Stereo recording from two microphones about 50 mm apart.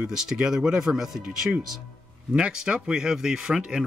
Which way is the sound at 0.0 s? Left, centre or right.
Centre.